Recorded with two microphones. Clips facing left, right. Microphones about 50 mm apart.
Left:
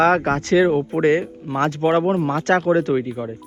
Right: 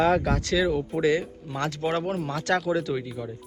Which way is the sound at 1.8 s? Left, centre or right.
Left.